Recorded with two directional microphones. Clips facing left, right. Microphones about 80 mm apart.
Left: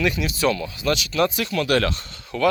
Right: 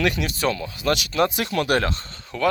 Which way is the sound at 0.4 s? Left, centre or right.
Right.